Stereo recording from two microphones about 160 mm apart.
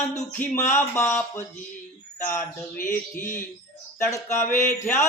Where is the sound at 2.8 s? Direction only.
55° left (ahead or behind).